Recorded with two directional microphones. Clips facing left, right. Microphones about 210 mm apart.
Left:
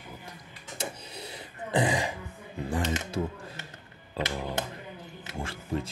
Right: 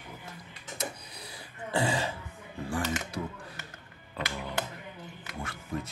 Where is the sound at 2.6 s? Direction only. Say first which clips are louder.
Left 2 dB; 20° left (ahead or behind).